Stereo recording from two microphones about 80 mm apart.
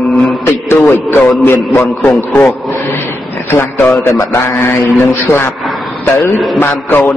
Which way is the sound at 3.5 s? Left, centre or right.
Left.